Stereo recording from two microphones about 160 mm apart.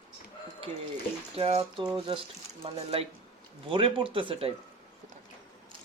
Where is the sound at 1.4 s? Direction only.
35° right (ahead or behind).